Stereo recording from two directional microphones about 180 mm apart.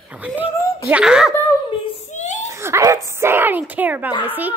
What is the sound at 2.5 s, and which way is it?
A child's voice, 15° right (ahead or behind).